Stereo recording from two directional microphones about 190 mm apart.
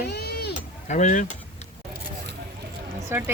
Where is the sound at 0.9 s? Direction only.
40° left (ahead or behind).